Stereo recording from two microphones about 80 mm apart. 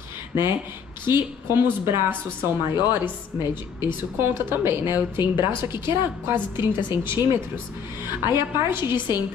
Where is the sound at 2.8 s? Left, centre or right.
Left.